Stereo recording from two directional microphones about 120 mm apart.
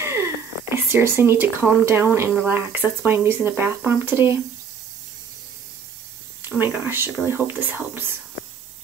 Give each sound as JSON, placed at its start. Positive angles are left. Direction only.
{"t": 0.0, "sound": "a sound", "side_deg": -20}
{"t": 2.3, "sound": "speech", "side_deg": -15}
{"t": 6.6, "sound": "speech", "side_deg": -20}